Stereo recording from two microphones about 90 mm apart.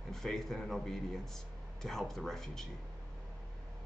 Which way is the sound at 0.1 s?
5° left (ahead or behind).